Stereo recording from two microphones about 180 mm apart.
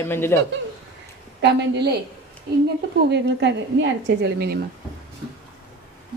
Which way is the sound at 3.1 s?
75° right (ahead or behind).